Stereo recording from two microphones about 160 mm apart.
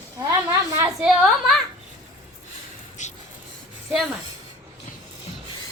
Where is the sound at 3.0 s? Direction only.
50° left (ahead or behind).